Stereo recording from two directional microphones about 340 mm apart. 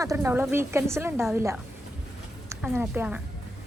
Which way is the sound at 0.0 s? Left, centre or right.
Centre.